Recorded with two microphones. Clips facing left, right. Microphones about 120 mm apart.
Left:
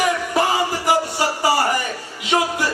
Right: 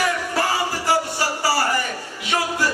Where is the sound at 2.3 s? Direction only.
20° left (ahead or behind).